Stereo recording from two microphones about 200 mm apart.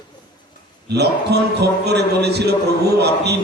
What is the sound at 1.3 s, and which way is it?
A man's voice, 55° right (ahead or behind).